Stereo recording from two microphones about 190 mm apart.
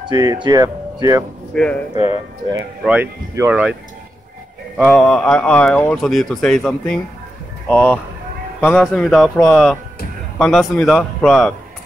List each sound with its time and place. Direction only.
0.1 s speech: 20° right (ahead or behind)
1.5 s speech: 5° left (ahead or behind)
2.8 s speech: 10° right (ahead or behind)
4.7 s a man's voice: 5° left (ahead or behind)